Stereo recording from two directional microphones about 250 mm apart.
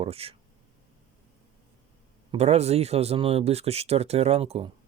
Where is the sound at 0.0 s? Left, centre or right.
Right.